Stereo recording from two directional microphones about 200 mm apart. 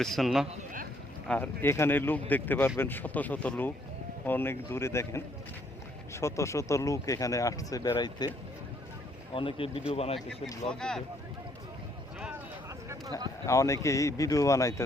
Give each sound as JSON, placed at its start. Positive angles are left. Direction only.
{"t": 0.0, "sound": "a man's voice", "side_deg": 0}
{"t": 0.5, "sound": "speech", "side_deg": -40}
{"t": 1.3, "sound": "speech", "side_deg": 10}
{"t": 9.3, "sound": "a man's voice", "side_deg": 25}
{"t": 10.7, "sound": "a man's voice", "side_deg": 5}
{"t": 12.9, "sound": "a sound", "side_deg": -15}
{"t": 13.5, "sound": "speech", "side_deg": 15}